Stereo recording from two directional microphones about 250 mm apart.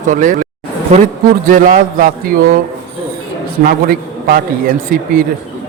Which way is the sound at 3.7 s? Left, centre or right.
Right.